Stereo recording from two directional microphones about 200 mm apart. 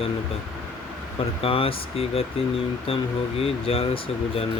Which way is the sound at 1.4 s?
25° left (ahead or behind).